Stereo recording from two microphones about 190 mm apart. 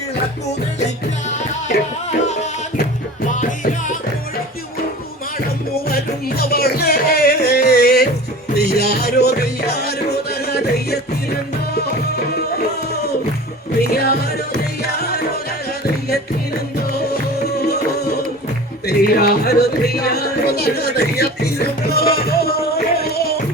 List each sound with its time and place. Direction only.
1.3 s music: 35° left (ahead or behind)
5.9 s music: 55° left (ahead or behind)
13.8 s music: 55° left (ahead or behind)
16.7 s music: 55° left (ahead or behind)
18.9 s music: 55° left (ahead or behind)